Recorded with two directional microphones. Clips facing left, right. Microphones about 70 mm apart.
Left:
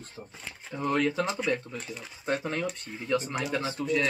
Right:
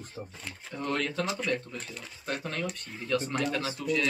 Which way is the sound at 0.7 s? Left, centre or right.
Centre.